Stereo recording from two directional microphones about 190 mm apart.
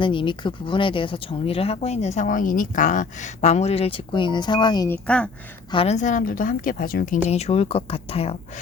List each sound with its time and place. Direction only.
0.0 s speech: 25° left (ahead or behind)
4.9 s speech: 5° left (ahead or behind)
5.7 s a woman's voice: 35° left (ahead or behind)